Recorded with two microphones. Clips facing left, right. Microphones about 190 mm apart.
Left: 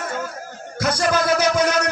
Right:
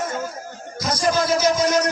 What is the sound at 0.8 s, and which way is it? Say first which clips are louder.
Music: left 1 dB; 65° left (ahead or behind).